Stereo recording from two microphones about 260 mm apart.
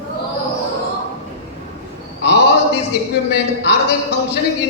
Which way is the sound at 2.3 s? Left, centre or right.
Left.